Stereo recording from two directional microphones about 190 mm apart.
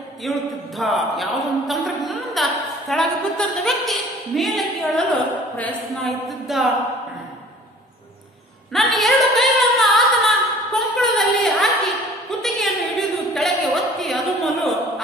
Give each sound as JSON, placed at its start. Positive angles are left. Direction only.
{"t": 0.2, "sound": "speech", "side_deg": 0}
{"t": 8.7, "sound": "a capella", "side_deg": 0}
{"t": 12.3, "sound": "a sound", "side_deg": 0}